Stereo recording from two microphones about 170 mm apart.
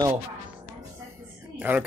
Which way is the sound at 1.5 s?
10° right (ahead or behind).